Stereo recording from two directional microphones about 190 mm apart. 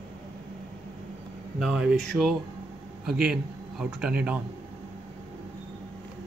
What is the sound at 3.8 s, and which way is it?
Speech, 5° right (ahead or behind).